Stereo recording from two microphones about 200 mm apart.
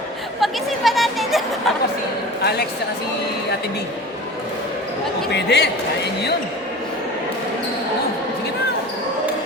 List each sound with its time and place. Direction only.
0.3 s speech: centre (ahead or behind)
2.4 s speech: 55° left (ahead or behind)
5.3 s speech: 60° left (ahead or behind)